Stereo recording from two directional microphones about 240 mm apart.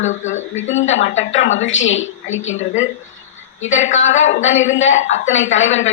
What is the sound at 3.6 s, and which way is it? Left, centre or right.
A woman's voice, left.